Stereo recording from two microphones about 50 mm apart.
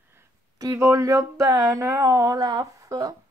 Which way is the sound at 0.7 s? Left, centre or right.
Right.